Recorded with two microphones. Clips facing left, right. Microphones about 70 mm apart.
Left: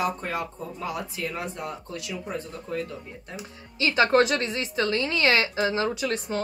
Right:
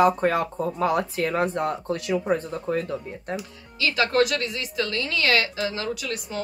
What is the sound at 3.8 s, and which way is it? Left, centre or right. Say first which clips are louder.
A woman's voice: left 1 dB; left.